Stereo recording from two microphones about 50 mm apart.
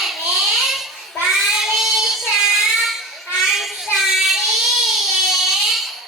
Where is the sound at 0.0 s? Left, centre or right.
Centre.